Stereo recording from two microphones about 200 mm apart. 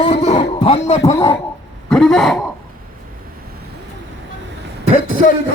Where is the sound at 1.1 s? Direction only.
15° left (ahead or behind).